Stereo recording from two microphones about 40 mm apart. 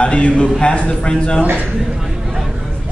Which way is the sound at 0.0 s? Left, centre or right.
Left.